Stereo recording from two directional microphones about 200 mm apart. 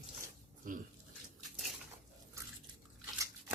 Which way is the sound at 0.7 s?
45° right (ahead or behind).